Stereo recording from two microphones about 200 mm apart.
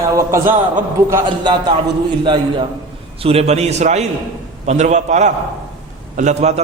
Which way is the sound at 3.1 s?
30° right (ahead or behind).